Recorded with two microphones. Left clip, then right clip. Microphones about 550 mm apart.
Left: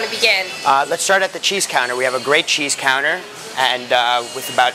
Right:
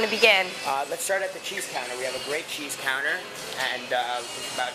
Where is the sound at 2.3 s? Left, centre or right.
Left.